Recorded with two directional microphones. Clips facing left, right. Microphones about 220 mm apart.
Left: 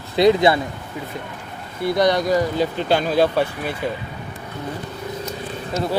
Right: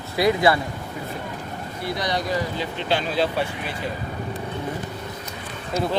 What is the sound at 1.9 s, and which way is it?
Speech, 50° left (ahead or behind).